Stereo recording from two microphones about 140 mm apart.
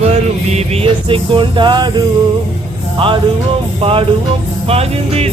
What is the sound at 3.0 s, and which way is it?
Music, 40° right (ahead or behind).